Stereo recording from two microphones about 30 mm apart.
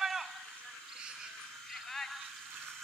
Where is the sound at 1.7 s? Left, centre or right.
Centre.